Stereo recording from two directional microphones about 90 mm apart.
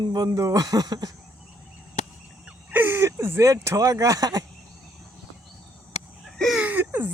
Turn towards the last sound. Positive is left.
turn(degrees=-20)  # may be behind; listen again after turning